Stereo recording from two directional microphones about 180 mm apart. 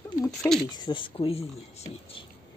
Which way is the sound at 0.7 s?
25° left (ahead or behind).